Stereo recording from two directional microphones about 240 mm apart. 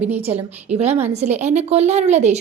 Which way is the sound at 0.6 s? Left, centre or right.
Right.